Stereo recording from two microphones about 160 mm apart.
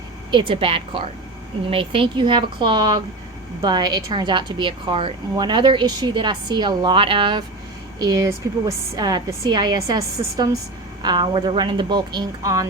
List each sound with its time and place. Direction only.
0.3 s a woman's voice: 30° right (ahead or behind)